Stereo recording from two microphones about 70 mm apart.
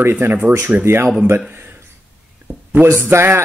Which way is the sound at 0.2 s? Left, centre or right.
Right.